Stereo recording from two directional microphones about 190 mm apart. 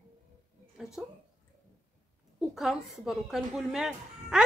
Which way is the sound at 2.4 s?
Centre (ahead or behind).